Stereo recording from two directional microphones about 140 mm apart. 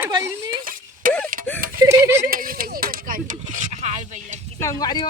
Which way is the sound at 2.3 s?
90° right.